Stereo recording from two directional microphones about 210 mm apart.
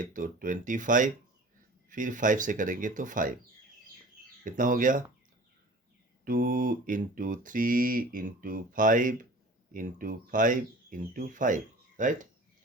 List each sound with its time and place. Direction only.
0.0 s speech: 40° right (ahead or behind)
4.4 s speech: 40° right (ahead or behind)
6.2 s speech: 45° right (ahead or behind)